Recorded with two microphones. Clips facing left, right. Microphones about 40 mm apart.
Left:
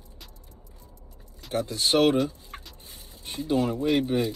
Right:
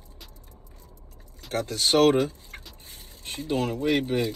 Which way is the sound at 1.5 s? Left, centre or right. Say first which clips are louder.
Right 1 dB; right.